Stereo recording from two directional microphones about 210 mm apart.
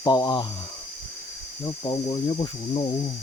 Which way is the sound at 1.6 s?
20° left (ahead or behind).